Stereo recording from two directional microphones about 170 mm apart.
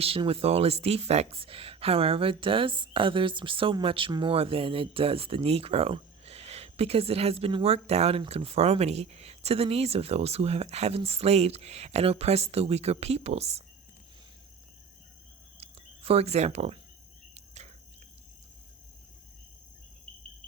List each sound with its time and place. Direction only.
0.0 s speech: 35° right (ahead or behind)
15.6 s a sound: 35° right (ahead or behind)
17.3 s cricket: 40° right (ahead or behind)